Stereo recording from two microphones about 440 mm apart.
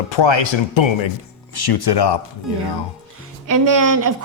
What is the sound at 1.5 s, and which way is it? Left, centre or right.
Speech, left.